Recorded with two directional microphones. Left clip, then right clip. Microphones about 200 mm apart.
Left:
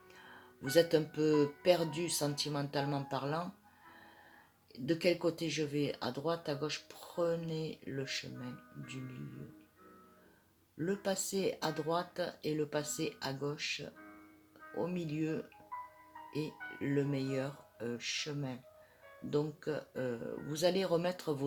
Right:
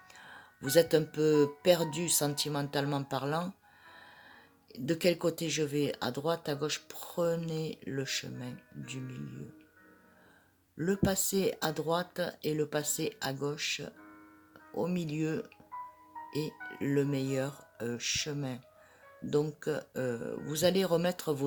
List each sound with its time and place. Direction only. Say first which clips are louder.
0.3 s speech: right 4 dB; 45° right (ahead or behind)
4.7 s speech: right 3 dB; 45° right (ahead or behind)
10.8 s speech: right 4 dB; 45° right (ahead or behind)